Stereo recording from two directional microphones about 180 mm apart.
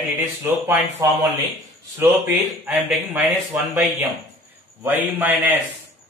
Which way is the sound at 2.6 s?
5° right (ahead or behind).